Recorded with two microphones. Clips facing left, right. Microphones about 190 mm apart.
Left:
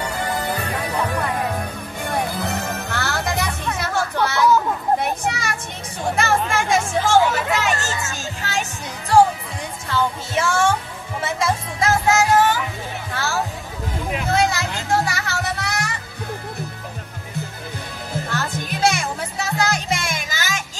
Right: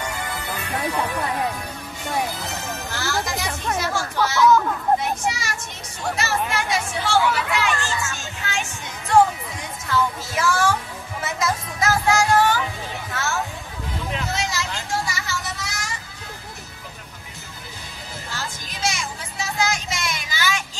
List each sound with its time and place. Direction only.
0.2 s music: 40° left (ahead or behind)
2.0 s music: 55° left (ahead or behind)
4.5 s children playing: 15° left (ahead or behind)
5.2 s child singing: 55° left (ahead or behind)
6.1 s chatter: 50° left (ahead or behind)
7.5 s music: 40° left (ahead or behind)
9.8 s music: 30° left (ahead or behind)
13.1 s music: 35° left (ahead or behind)
14.2 s music: 55° left (ahead or behind)
18.3 s music: 60° left (ahead or behind)